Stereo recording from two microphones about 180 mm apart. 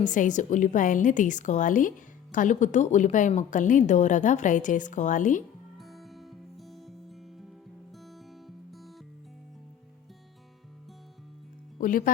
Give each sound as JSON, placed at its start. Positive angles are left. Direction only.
{"t": 0.0, "sound": "a woman's voice", "side_deg": 45}
{"t": 5.7, "sound": "music", "side_deg": 0}
{"t": 11.8, "sound": "a woman's voice", "side_deg": 50}